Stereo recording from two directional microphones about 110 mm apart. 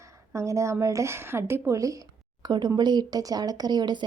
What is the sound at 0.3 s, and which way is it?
A woman's voice, 25° right (ahead or behind).